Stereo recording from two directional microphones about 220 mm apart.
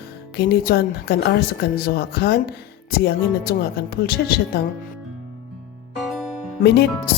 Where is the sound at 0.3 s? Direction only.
45° left (ahead or behind).